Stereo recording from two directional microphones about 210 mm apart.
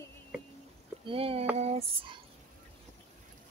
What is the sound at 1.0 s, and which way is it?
Female singing, 25° right (ahead or behind).